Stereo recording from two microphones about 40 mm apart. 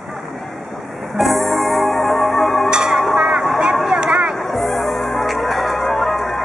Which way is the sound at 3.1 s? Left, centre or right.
Right.